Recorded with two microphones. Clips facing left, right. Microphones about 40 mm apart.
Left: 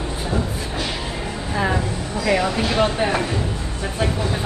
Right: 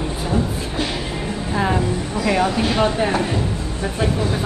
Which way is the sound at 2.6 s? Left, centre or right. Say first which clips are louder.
Right 1 dB; left.